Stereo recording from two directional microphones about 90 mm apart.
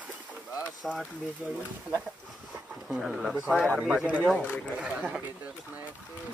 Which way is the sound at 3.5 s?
10° left (ahead or behind).